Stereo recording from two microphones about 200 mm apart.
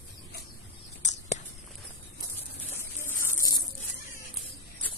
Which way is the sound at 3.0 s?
15° left (ahead or behind).